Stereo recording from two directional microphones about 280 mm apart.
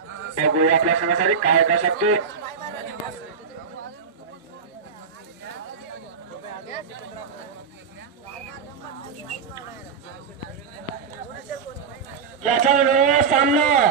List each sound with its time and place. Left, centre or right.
0.5 s a man's voice: right
12.4 s a man's voice: right